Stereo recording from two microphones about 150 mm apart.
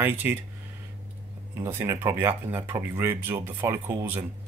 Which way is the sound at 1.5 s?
20° right (ahead or behind).